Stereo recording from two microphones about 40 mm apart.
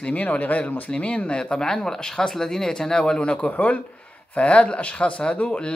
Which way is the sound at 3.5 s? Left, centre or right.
Left.